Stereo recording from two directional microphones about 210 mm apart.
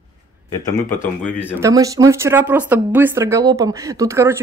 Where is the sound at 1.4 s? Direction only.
15° right (ahead or behind).